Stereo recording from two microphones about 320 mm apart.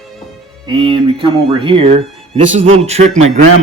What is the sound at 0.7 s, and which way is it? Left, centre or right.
Speech, centre.